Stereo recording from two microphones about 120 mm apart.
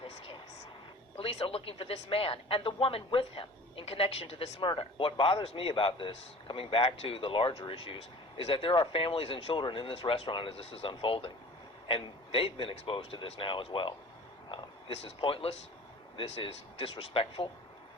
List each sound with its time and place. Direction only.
1.2 s speech: 50° left (ahead or behind)